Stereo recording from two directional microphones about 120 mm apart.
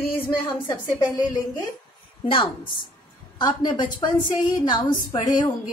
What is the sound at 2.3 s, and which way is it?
A woman's voice, 45° left (ahead or behind).